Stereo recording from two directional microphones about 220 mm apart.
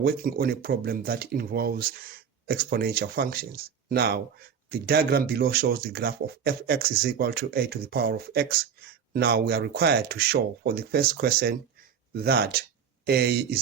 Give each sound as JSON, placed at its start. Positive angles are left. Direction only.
{"t": 0.0, "sound": "speech", "side_deg": -40}